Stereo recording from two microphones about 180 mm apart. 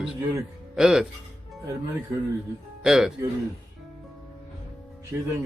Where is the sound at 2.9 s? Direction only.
5° right (ahead or behind).